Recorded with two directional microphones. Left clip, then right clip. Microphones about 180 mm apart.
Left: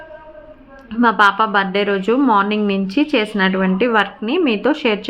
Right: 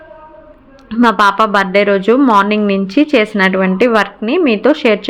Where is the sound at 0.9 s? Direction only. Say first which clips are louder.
Right 3 dB; 20° right (ahead or behind).